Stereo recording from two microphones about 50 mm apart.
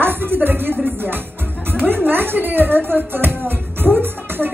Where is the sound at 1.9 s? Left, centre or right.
Right.